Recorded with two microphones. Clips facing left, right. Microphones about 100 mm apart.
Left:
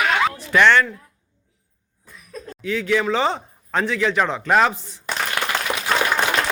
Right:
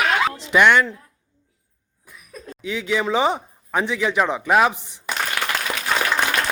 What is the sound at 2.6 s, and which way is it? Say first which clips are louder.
Speech: left 2 dB; 15° right (ahead or behind).